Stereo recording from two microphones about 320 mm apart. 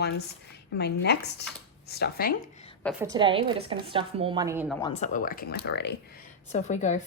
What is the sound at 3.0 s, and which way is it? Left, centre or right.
A woman's voice, centre.